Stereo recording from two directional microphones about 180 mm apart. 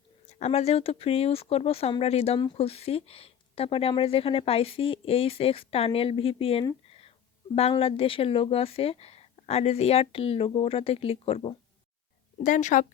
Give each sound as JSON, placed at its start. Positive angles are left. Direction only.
{"t": 0.3, "sound": "speech", "side_deg": 35}
{"t": 6.8, "sound": "a sound", "side_deg": 35}
{"t": 7.5, "sound": "speech", "side_deg": 35}
{"t": 12.4, "sound": "speech", "side_deg": 45}